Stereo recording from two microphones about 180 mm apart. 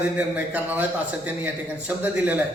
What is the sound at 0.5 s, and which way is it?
Speech, 10° right (ahead or behind).